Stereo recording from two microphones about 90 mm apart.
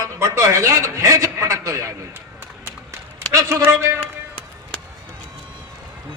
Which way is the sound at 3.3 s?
35° right (ahead or behind).